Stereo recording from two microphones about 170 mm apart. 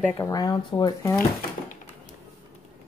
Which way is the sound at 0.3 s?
25° left (ahead or behind).